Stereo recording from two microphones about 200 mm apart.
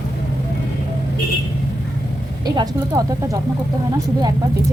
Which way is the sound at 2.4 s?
20° right (ahead or behind).